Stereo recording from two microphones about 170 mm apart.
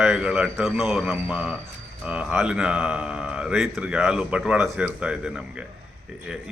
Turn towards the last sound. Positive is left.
turn(degrees=-5)  # may be behind; listen again after turning